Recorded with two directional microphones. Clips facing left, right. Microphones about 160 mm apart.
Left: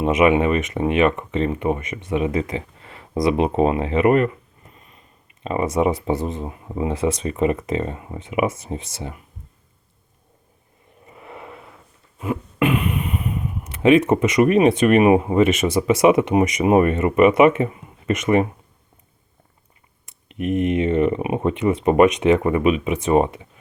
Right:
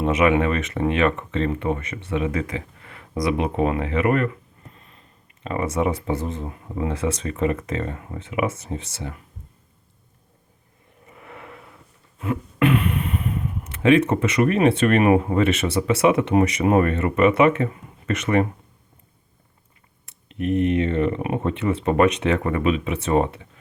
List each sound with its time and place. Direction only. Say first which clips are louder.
0.0 s speech: left 2 dB; 20° left (ahead or behind)
5.4 s speech: left 3 dB; 20° left (ahead or behind)
11.1 s a sound: left 3 dB; 20° left (ahead or behind)
12.2 s speech: even; 15° left (ahead or behind)
20.1 s speech: even; 20° left (ahead or behind)